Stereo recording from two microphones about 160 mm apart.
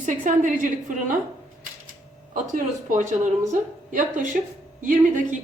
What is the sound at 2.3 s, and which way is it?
A woman's voice, 55° right (ahead or behind).